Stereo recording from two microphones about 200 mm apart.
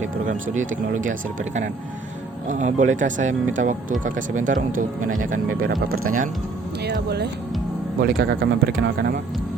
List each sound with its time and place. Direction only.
0.0 s speech: 40° right (ahead or behind)
2.5 s speech: 40° right (ahead or behind)
6.8 s speech: 55° right (ahead or behind)